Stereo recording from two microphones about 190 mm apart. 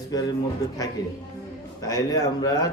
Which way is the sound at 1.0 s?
20° left (ahead or behind).